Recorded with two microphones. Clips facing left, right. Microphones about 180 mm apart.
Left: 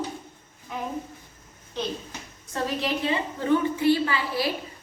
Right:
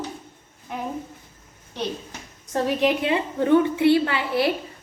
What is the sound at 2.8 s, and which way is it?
A woman's voice, 60° right (ahead or behind).